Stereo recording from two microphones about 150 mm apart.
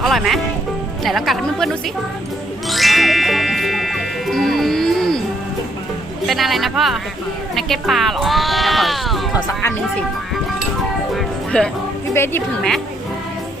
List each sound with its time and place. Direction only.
0.0 s music: centre (ahead or behind)
1.0 s speech: centre (ahead or behind)
2.6 s music: centre (ahead or behind)
6.2 s speech: centre (ahead or behind)
11.1 s music: 5° left (ahead or behind)
12.1 s speech: 15° left (ahead or behind)